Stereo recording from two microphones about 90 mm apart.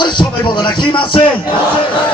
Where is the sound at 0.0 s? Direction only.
60° left (ahead or behind).